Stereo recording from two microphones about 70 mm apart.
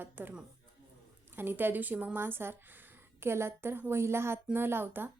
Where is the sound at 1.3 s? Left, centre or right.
Right.